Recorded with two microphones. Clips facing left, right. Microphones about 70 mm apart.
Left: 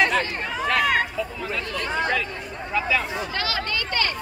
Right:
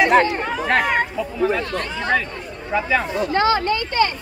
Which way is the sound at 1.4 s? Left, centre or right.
Right.